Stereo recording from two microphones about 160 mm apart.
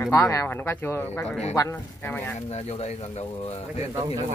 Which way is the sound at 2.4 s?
40° left (ahead or behind).